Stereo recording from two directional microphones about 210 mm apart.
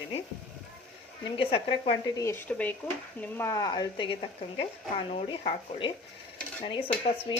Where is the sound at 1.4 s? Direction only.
25° left (ahead or behind).